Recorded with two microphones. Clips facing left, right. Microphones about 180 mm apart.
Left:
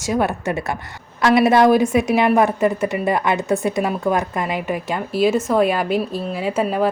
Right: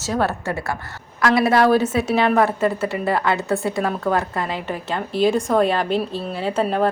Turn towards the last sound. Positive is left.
turn(degrees=5)  # may be behind; listen again after turning